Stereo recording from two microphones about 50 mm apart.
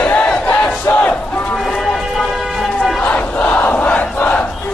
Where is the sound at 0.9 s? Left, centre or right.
Left.